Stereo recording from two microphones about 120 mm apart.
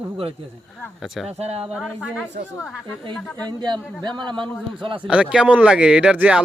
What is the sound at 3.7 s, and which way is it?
Speech, 35° right (ahead or behind).